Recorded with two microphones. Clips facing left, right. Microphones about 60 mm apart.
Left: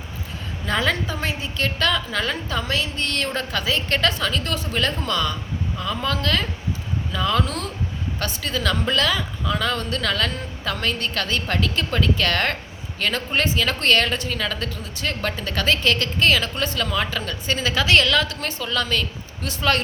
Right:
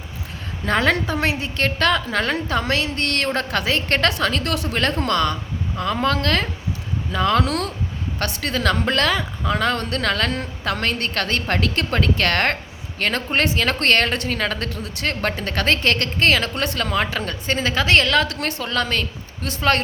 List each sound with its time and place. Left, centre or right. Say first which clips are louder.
0.6 s speech: right 4 dB; right
18.3 s speech: right 2 dB; right